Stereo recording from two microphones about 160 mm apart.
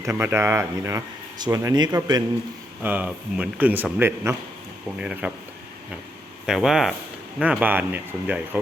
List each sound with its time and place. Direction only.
0.0 s speech: 15° right (ahead or behind)
2.8 s speech: 10° right (ahead or behind)
6.4 s speech: 5° right (ahead or behind)